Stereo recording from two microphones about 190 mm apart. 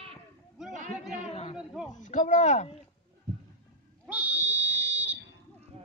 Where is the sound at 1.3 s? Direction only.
30° left (ahead or behind).